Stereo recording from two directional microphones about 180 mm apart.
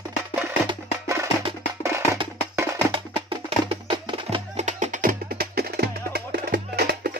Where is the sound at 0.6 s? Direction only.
15° right (ahead or behind).